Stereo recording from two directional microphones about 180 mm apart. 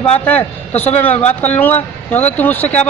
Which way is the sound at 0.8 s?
10° left (ahead or behind).